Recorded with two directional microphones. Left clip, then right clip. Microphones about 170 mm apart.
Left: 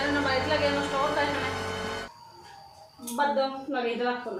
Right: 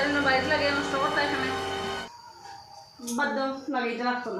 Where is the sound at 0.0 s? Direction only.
Centre (ahead or behind).